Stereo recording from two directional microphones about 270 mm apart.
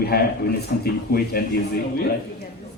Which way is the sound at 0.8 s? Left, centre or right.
Left.